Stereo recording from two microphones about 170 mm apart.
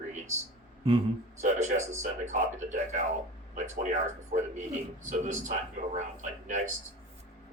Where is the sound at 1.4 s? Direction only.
45° right (ahead or behind).